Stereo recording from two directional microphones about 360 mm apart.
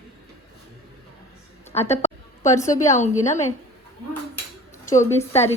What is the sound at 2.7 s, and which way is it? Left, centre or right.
Speech, centre.